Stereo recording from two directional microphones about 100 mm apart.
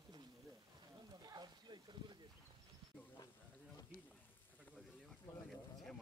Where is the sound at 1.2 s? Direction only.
45° right (ahead or behind).